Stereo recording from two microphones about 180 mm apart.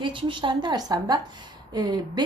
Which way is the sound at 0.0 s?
25° right (ahead or behind).